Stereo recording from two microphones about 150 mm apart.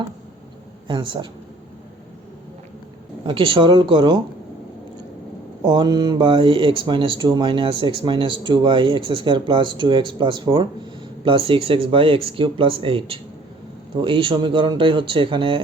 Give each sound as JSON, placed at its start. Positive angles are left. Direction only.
{"t": 0.9, "sound": "speech", "side_deg": -35}
{"t": 3.2, "sound": "speech", "side_deg": -35}
{"t": 5.6, "sound": "speech", "side_deg": -30}